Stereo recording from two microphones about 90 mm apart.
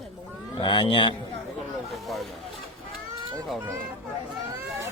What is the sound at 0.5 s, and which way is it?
Speech, 60° left (ahead or behind).